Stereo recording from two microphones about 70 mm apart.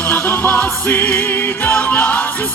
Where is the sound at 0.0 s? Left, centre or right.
Left.